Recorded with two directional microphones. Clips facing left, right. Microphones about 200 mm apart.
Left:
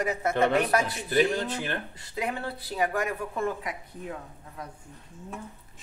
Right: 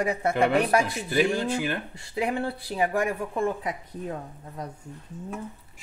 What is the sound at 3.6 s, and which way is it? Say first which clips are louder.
A woman's voice: right 4 dB; 40° right (ahead or behind).